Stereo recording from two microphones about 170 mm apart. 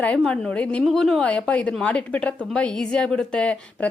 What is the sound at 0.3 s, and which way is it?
A woman's voice, 5° left (ahead or behind).